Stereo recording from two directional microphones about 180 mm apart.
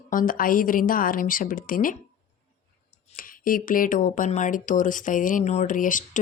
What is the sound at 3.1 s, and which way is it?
Speech, 50° left (ahead or behind).